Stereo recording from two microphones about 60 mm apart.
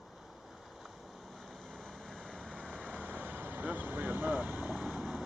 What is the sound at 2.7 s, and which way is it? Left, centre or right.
Vehicle, right.